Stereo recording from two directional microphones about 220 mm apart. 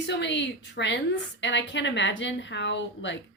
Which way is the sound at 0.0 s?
50° left (ahead or behind).